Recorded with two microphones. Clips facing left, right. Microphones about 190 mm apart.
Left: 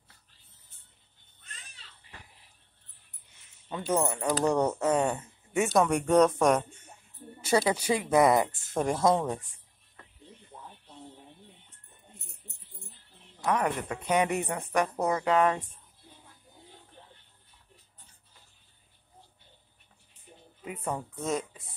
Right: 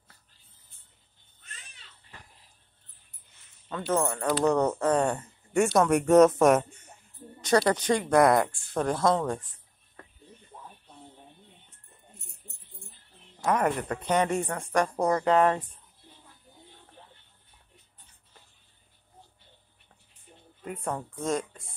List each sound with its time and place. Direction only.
3.6 s speech: 15° left (ahead or behind); by 6.6 s 5° right (ahead or behind)
7.4 s speech: 10° left (ahead or behind)
13.4 s music: centre (ahead or behind)
13.8 s speech: 5° left (ahead or behind)
20.6 s a woman's voice: 5° left (ahead or behind)